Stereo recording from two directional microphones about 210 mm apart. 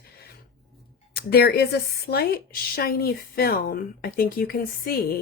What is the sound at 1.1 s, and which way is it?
A woman's voice, 50° left (ahead or behind).